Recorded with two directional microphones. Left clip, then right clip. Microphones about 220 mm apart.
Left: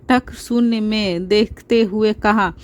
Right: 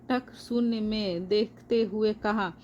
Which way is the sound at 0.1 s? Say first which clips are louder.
Left 12 dB; 45° left (ahead or behind).